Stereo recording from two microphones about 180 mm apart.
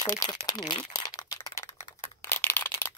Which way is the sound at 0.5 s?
25° left (ahead or behind).